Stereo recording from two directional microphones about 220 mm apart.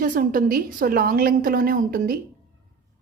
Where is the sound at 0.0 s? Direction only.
40° right (ahead or behind).